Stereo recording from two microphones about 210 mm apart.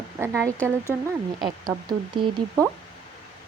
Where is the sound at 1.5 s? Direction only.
20° right (ahead or behind).